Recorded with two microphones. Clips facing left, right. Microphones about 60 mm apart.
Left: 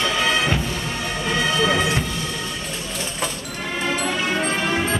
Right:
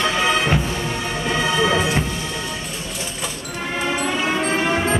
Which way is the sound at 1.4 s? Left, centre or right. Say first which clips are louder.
Right 1 dB; centre.